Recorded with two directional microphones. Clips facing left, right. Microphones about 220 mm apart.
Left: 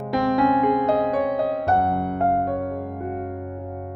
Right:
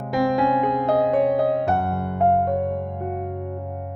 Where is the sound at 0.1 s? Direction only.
Centre (ahead or behind).